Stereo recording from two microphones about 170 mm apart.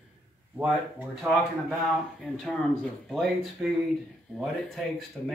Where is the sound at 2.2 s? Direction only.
5° left (ahead or behind).